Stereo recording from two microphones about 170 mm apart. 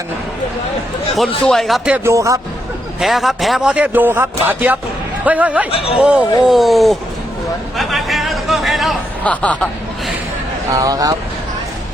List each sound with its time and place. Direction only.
1.1 s speech: centre (ahead or behind)
2.0 s speech: 20° right (ahead or behind)
3.0 s speech: centre (ahead or behind)
7.8 s a sound: centre (ahead or behind)
10.7 s speech: 20° right (ahead or behind)